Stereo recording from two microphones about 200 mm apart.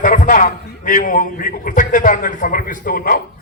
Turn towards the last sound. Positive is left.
turn(degrees=45)  # may be behind; listen again after turning